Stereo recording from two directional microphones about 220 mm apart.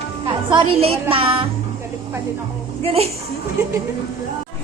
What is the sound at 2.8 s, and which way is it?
Speech, 25° right (ahead or behind).